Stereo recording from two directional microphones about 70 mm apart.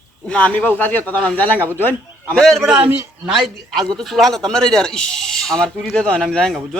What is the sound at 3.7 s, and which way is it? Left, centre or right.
Speech, centre.